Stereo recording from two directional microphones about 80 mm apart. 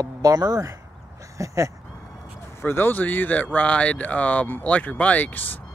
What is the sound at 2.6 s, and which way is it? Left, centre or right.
Speech, left.